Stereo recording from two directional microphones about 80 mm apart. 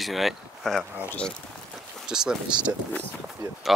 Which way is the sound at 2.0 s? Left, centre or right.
Centre.